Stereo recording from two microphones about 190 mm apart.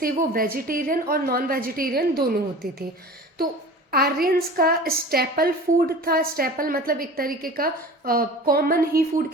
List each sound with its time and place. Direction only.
0.0 s a woman's voice: 50° right (ahead or behind)
3.9 s a woman's voice: 55° right (ahead or behind)